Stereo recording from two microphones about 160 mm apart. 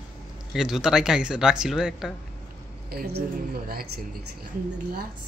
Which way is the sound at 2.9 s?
80° right.